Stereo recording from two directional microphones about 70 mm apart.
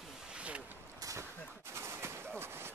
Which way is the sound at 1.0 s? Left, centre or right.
Right.